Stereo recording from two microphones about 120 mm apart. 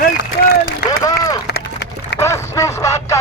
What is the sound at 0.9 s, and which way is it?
Run, 30° left (ahead or behind).